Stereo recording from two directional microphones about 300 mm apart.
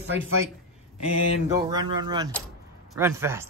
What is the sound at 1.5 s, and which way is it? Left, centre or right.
Speech, centre.